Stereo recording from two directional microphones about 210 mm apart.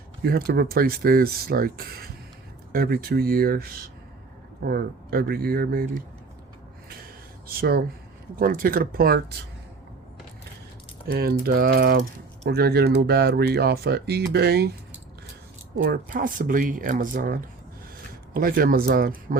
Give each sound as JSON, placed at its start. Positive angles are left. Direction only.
{"t": 0.2, "sound": "speech", "side_deg": -45}
{"t": 7.4, "sound": "speech", "side_deg": -45}
{"t": 11.1, "sound": "speech", "side_deg": -45}
{"t": 15.8, "sound": "speech", "side_deg": -40}